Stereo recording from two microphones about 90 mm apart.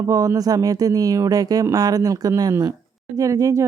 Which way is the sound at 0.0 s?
40° right (ahead or behind).